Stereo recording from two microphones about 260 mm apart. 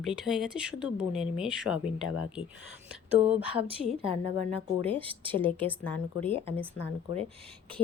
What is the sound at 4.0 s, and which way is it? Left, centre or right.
A woman's voice, right.